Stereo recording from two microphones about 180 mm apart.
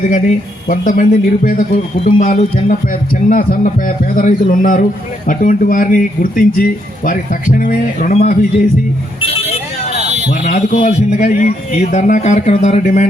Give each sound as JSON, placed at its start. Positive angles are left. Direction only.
{"t": 0.0, "sound": "a man's voice", "side_deg": 45}
{"t": 9.2, "sound": "vehicle", "side_deg": 35}
{"t": 10.4, "sound": "a man's voice", "side_deg": 45}